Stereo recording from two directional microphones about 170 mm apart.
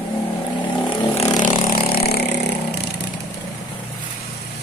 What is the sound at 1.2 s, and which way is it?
Vehicle, 50° left (ahead or behind).